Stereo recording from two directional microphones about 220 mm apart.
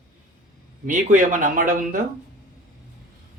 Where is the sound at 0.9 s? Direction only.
35° right (ahead or behind).